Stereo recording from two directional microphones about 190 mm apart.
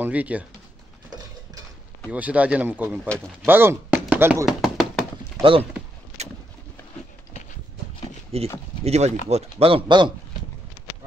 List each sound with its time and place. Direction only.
0.0 s speech: 10° right (ahead or behind)
2.0 s speech: 10° right (ahead or behind)
3.4 s knock: 10° right (ahead or behind)
5.4 s speech: 30° right (ahead or behind)
8.3 s speech: 30° right (ahead or behind)